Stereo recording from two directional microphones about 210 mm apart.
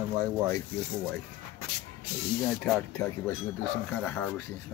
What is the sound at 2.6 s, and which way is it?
A woman's voice, 10° left (ahead or behind).